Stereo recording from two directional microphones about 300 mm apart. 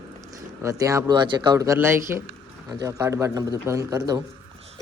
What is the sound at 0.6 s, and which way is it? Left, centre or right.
Speech, centre.